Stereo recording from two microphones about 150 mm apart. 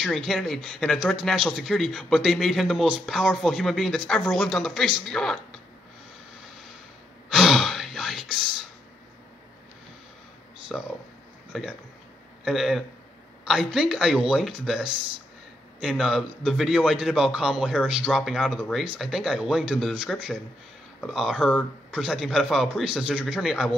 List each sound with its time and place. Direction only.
0.0 s a man's voice: centre (ahead or behind)
7.2 s sigh: 5° right (ahead or behind)
10.7 s a man's voice: centre (ahead or behind)